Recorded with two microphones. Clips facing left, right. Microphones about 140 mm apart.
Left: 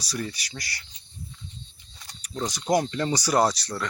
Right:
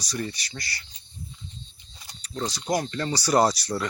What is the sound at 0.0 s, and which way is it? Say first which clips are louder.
Speech: right 1 dB; 5° left (ahead or behind).